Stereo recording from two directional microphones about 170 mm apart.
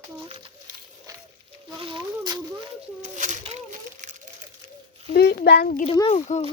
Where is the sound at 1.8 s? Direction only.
30° right (ahead or behind).